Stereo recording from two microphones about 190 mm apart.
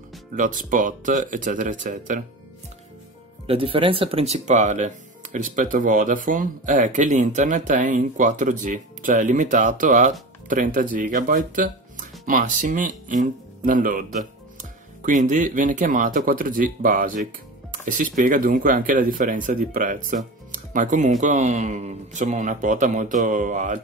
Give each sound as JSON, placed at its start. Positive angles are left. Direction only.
{"t": 0.4, "sound": "speech", "side_deg": -45}
{"t": 3.4, "sound": "speech", "side_deg": -30}